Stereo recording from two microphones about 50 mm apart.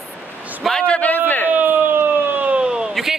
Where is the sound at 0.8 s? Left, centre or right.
Left.